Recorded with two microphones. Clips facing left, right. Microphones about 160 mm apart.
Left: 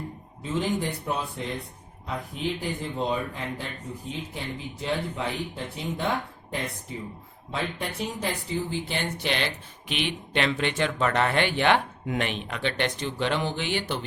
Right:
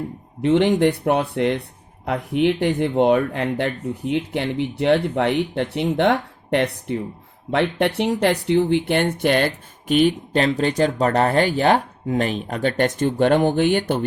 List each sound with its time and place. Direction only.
0.4 s speech: 75° right (ahead or behind); by 14.0 s 50° right (ahead or behind)